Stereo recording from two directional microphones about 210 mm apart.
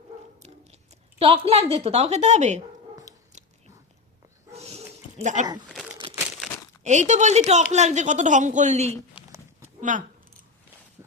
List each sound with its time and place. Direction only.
1.2 s a woman's voice: 30° right (ahead or behind)
4.5 s dog: 30° right (ahead or behind)
6.8 s speech: 35° right (ahead or behind)
9.1 s a sound: 10° right (ahead or behind)
9.9 s speech: 35° right (ahead or behind)